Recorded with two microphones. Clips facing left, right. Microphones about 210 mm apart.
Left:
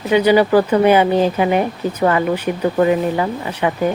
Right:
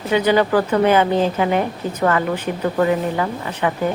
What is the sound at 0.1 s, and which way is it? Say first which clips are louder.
Speech: left 4 dB; 10° left (ahead or behind).